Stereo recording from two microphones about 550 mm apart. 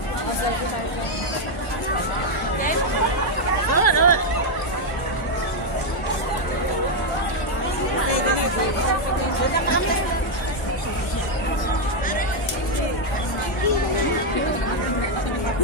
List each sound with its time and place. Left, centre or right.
3.7 s hubbub: left